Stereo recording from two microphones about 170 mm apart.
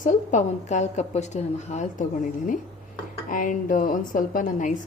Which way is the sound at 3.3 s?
50° left (ahead or behind).